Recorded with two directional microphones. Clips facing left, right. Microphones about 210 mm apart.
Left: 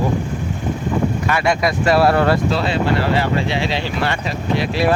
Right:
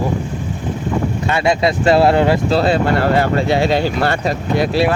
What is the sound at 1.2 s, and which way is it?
Speech, 25° right (ahead or behind).